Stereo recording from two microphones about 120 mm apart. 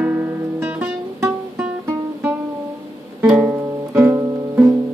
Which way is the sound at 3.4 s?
20° right (ahead or behind).